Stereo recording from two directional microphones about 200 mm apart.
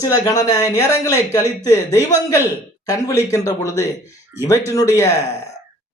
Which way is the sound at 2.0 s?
10° right (ahead or behind).